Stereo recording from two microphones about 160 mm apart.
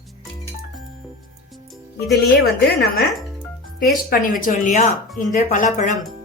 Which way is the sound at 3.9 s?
60° left (ahead or behind).